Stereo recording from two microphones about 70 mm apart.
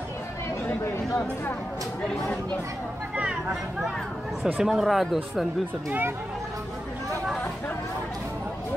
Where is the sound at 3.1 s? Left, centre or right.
Centre.